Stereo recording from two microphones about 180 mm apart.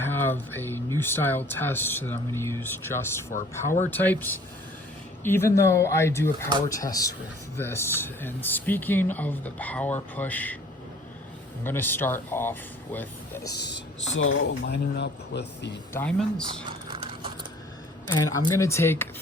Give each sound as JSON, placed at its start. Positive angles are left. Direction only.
{"t": 0.0, "sound": "speech", "side_deg": 10}
{"t": 11.6, "sound": "speech", "side_deg": 10}
{"t": 13.6, "sound": "speech", "side_deg": 70}
{"t": 15.9, "sound": "speech", "side_deg": 10}
{"t": 16.9, "sound": "a sound", "side_deg": -30}
{"t": 18.1, "sound": "speech", "side_deg": 15}